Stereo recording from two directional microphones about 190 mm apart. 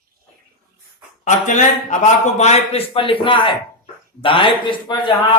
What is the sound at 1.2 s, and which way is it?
A man's voice, 40° left (ahead or behind).